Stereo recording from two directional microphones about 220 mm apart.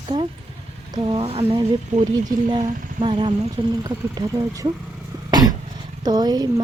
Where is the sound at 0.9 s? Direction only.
20° right (ahead or behind).